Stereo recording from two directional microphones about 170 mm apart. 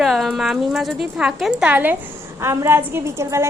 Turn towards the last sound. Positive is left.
turn(degrees=-15)  # may be behind; listen again after turning